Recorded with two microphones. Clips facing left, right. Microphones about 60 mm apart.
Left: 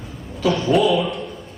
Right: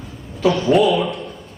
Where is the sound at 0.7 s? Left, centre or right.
Right.